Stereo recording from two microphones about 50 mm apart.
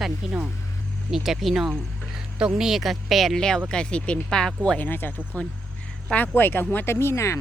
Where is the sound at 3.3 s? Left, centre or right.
Centre.